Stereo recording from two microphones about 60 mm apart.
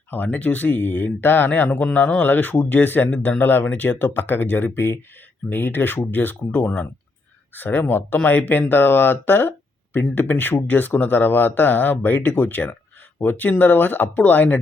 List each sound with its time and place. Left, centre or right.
0.1 s speech: left